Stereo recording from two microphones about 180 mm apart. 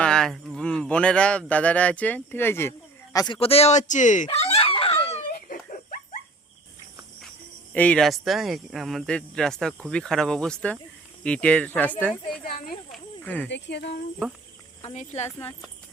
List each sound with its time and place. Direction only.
0.0 s speech: 5° left (ahead or behind); by 5.2 s 30° left (ahead or behind)
5.5 s dog: 50° left (ahead or behind)
7.7 s speech: 5° left (ahead or behind)
13.5 s speech: 75° left (ahead or behind)
14.9 s speech: 40° left (ahead or behind)